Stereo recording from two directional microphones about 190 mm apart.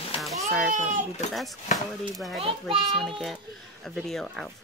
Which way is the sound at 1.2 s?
35° left (ahead or behind).